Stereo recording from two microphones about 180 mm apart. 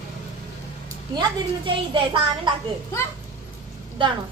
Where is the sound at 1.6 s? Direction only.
30° right (ahead or behind).